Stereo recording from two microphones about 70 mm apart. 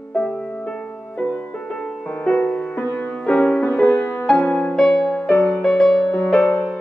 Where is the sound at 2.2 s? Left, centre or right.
Centre.